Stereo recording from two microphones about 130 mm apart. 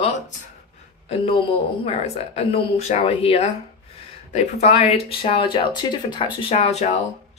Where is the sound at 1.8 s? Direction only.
55° left (ahead or behind).